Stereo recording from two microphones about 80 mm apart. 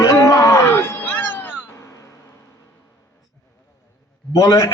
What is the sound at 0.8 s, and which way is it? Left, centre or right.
Cat, left.